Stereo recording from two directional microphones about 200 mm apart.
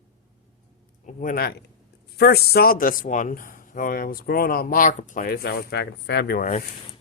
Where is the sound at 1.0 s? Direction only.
40° left (ahead or behind).